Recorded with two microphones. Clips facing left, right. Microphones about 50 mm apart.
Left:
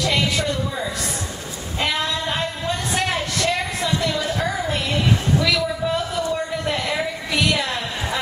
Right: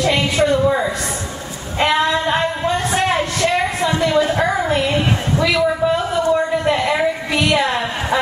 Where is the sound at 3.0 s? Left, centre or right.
Right.